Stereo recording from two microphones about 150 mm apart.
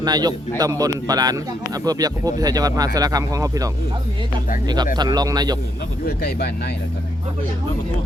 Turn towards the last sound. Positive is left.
turn(degrees=90)